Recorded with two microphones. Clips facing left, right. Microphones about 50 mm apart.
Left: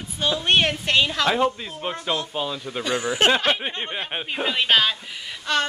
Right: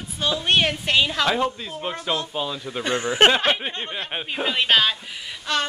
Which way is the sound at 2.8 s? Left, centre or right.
Right.